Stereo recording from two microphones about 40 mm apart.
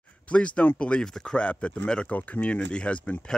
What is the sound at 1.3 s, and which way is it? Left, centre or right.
Speech, left.